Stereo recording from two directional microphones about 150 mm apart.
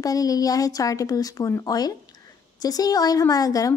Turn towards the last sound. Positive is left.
turn(degrees=25)  # may be behind; listen again after turning